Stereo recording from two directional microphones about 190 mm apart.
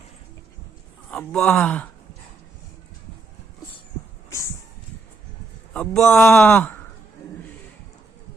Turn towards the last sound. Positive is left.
turn(degrees=10)  # may be behind; listen again after turning